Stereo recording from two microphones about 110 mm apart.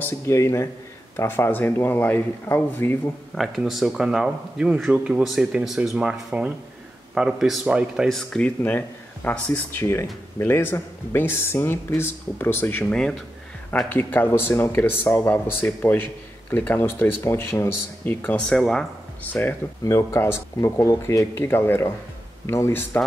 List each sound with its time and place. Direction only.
0.0 s speech: 25° left (ahead or behind)
3.3 s speech: centre (ahead or behind); by 12.8 s 20° left (ahead or behind)
13.8 s speech: 20° left (ahead or behind)
19.8 s speech: 30° left (ahead or behind)